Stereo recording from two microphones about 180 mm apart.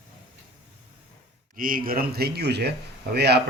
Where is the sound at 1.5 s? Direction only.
50° right (ahead or behind).